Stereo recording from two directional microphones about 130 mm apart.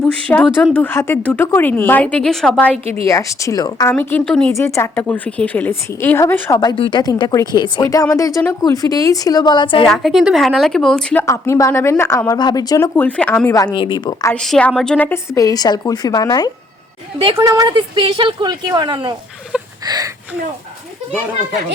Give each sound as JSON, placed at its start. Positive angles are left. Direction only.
{"t": 0.0, "sound": "speech", "side_deg": 10}
{"t": 3.1, "sound": "a woman's voice", "side_deg": 25}
{"t": 4.3, "sound": "speech", "side_deg": 5}
{"t": 4.5, "sound": "speech", "side_deg": 20}
{"t": 6.6, "sound": "a woman's voice", "side_deg": 35}
{"t": 9.8, "sound": "speech", "side_deg": 0}
{"t": 12.4, "sound": "a woman's voice", "side_deg": 30}
{"t": 13.1, "sound": "speech", "side_deg": 10}
{"t": 13.5, "sound": "a woman's voice", "side_deg": 25}
{"t": 13.7, "sound": "speech", "side_deg": 40}
{"t": 14.3, "sound": "a woman's voice", "side_deg": 5}
{"t": 15.3, "sound": "a woman's voice", "side_deg": 25}
{"t": 17.3, "sound": "speech", "side_deg": -25}